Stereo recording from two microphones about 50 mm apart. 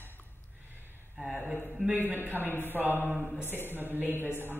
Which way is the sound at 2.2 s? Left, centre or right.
Left.